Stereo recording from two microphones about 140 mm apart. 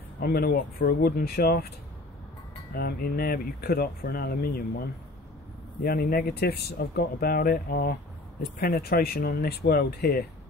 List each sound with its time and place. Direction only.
0.2 s speech: 90° left
2.7 s speech: 90° left